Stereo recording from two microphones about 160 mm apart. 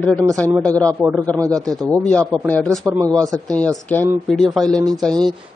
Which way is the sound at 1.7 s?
Centre (ahead or behind).